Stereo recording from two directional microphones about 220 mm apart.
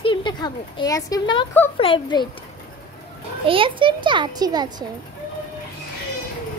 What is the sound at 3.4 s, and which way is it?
A child's voice, 25° right (ahead or behind).